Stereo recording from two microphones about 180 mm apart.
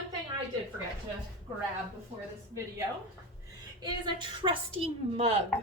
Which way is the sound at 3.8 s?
25° right (ahead or behind).